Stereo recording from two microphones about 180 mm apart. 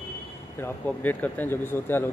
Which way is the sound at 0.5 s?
10° left (ahead or behind).